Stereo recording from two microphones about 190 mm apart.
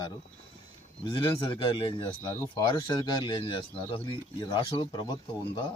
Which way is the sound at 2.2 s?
15° left (ahead or behind).